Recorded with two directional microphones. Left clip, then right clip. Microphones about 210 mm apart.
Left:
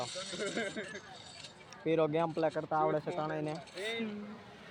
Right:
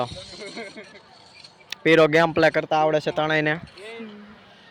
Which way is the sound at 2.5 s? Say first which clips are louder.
Right 12 dB; 45° right (ahead or behind).